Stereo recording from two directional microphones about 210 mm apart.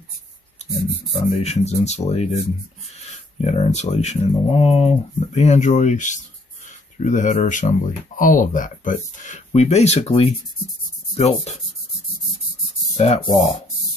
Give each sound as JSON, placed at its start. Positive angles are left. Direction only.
{"t": 1.1, "sound": "speech", "side_deg": 30}
{"t": 12.9, "sound": "speech", "side_deg": 30}